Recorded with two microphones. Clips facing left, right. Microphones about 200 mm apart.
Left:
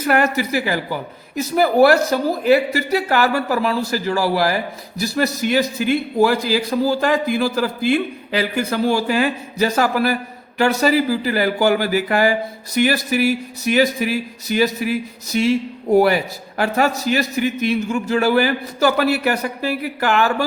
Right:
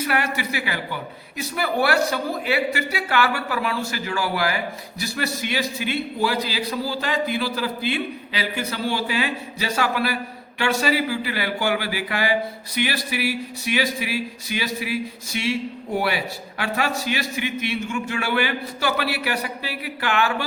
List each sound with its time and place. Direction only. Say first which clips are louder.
0.0 s speech: left 7 dB; 45° left (ahead or behind)